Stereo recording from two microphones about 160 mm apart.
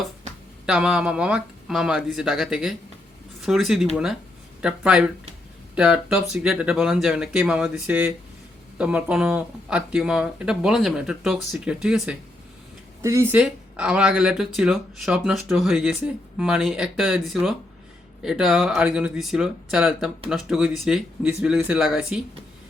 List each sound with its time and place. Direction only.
0.6 s speech: 5° right (ahead or behind)
13.0 s speech: 20° right (ahead or behind)
13.4 s speech: 5° right (ahead or behind)